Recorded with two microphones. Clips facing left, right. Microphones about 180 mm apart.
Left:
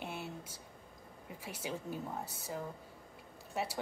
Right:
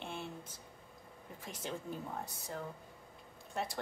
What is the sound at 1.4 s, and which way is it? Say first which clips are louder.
A woman's voice: left 1 dB; 10° left (ahead or behind).